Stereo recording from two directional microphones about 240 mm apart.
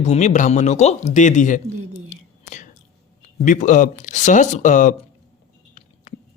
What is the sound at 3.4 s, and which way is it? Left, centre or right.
Speech, left.